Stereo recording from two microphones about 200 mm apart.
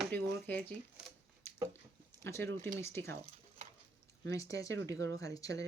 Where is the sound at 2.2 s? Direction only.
15° left (ahead or behind).